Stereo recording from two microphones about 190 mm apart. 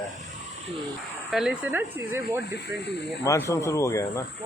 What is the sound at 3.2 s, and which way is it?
Speech, 15° left (ahead or behind).